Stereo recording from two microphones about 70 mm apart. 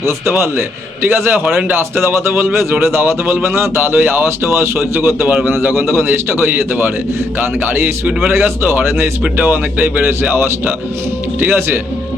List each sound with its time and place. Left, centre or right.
0.0 s speech: right